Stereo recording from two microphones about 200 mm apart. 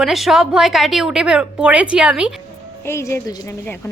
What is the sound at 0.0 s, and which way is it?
A woman's voice, centre (ahead or behind).